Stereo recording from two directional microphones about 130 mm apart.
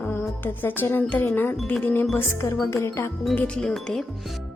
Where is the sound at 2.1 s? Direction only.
20° left (ahead or behind).